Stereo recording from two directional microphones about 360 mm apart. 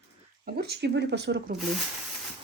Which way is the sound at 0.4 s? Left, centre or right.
Right.